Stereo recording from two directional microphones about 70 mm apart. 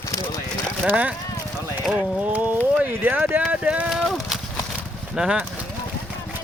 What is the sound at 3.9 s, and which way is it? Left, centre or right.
Horse, centre.